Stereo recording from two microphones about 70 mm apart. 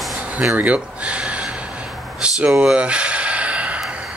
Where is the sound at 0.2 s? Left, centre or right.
Centre.